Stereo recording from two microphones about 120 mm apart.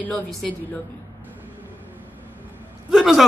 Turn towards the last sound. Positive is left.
turn(degrees=-5)  # may be behind; listen again after turning